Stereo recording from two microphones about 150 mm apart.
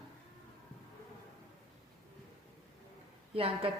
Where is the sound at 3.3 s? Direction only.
40° right (ahead or behind).